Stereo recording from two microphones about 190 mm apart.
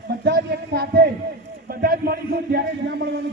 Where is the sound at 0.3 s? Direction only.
60° right (ahead or behind).